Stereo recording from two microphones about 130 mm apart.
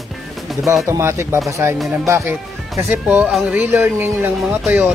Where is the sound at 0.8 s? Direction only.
20° right (ahead or behind).